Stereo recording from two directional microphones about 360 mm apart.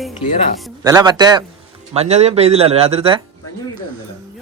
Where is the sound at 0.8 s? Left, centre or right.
Centre.